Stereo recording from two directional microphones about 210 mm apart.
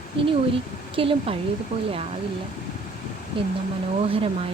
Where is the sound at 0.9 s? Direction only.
25° right (ahead or behind).